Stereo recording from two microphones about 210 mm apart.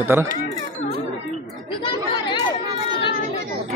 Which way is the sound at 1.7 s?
20° left (ahead or behind).